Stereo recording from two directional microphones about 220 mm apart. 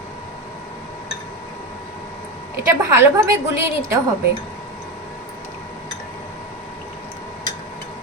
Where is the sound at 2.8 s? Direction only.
15° right (ahead or behind).